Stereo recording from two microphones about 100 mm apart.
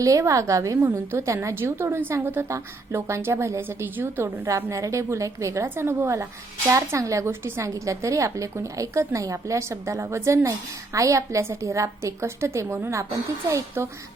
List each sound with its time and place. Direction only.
0.0 s a woman's voice: 35° right (ahead or behind)